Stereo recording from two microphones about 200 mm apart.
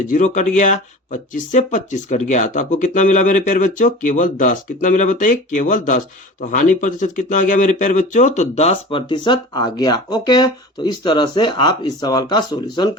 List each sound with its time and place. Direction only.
0.1 s speech: 40° left (ahead or behind); by 12.9 s 20° left (ahead or behind)